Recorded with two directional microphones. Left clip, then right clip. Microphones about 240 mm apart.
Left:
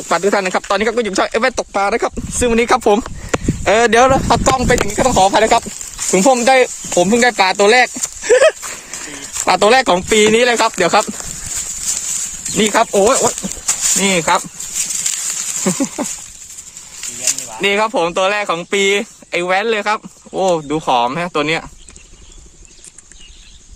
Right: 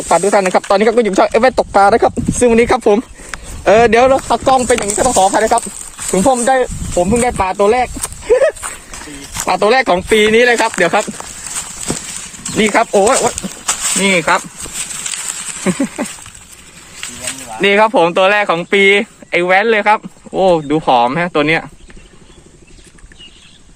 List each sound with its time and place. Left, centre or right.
0.1 s speech: centre
2.5 s speech: centre
4.1 s speech: left
5.3 s speech: left; by 11.0 s centre
12.5 s speech: centre
15.6 s speech: centre
17.6 s speech: centre